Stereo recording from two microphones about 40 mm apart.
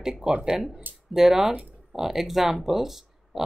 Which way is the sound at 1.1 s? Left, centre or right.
Centre.